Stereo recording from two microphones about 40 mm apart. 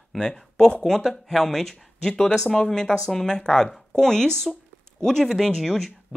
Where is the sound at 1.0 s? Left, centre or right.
Centre.